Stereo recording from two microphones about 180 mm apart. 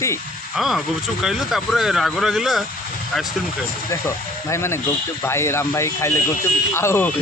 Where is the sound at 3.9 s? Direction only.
15° left (ahead or behind).